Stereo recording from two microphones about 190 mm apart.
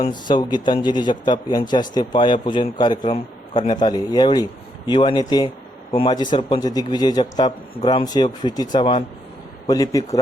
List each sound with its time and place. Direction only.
0.1 s a man's voice: 25° left (ahead or behind)